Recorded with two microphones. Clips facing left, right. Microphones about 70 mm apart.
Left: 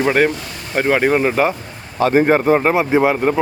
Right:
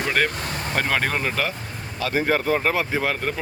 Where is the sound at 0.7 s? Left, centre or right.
Centre.